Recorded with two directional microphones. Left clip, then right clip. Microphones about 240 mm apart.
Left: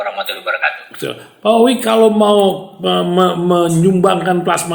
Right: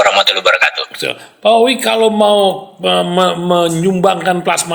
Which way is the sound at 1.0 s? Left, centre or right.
Right.